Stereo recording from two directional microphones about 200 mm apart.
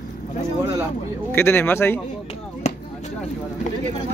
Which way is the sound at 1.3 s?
10° left (ahead or behind).